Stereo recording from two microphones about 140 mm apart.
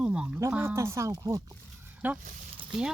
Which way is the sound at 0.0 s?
5° right (ahead or behind).